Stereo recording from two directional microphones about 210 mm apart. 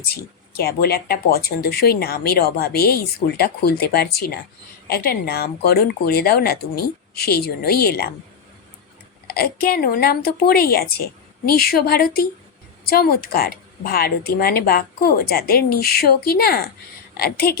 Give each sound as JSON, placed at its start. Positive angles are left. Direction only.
{"t": 0.1, "sound": "speech", "side_deg": 50}
{"t": 9.2, "sound": "speech", "side_deg": 45}